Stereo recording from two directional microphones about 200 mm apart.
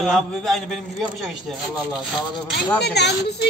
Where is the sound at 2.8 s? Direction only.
55° left (ahead or behind).